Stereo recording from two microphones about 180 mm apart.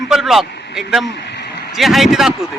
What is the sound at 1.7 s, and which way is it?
Speech, centre (ahead or behind).